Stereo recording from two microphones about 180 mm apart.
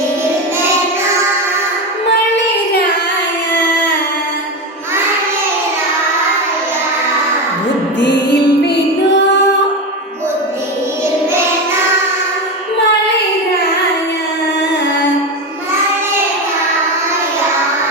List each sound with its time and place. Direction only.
2.3 s child singing: 70° left (ahead or behind)
7.9 s music: 70° left (ahead or behind)